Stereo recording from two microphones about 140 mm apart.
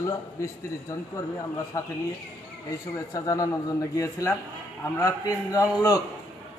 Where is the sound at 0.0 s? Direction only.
20° left (ahead or behind).